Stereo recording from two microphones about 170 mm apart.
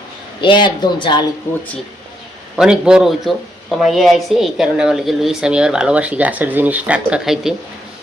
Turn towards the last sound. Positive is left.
turn(degrees=-5)  # may be behind; listen again after turning